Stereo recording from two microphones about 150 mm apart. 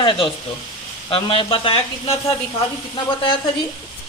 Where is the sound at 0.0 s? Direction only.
35° left (ahead or behind).